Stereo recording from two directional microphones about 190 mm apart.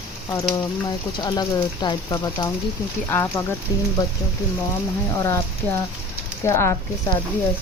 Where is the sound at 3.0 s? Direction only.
10° left (ahead or behind).